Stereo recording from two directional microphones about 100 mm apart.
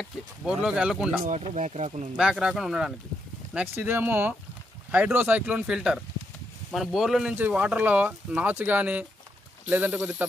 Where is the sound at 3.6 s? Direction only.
20° right (ahead or behind); by 7.3 s 5° right (ahead or behind).